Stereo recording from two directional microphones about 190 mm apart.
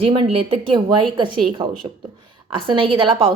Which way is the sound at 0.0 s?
30° right (ahead or behind).